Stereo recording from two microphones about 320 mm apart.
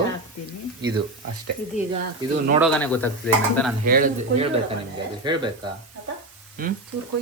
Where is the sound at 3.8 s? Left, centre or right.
Right.